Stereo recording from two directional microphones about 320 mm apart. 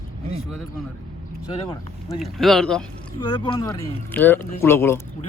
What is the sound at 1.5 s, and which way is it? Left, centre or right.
Speech, centre.